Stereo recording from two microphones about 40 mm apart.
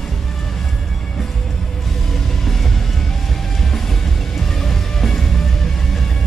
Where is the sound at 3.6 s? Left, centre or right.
Centre.